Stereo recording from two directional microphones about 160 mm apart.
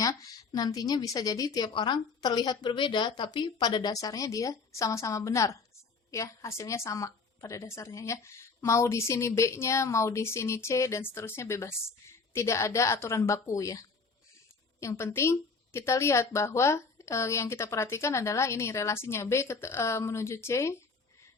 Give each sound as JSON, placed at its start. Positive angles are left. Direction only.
{"t": 0.0, "sound": "a woman's voice", "side_deg": 25}